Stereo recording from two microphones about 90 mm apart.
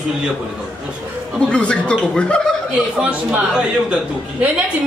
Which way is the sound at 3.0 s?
10° right (ahead or behind).